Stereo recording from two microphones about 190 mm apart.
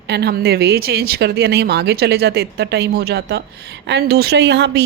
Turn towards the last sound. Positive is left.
turn(degrees=-65)  # may be behind; listen again after turning